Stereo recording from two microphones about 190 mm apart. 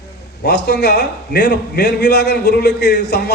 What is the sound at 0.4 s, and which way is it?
A man's voice, 60° left (ahead or behind).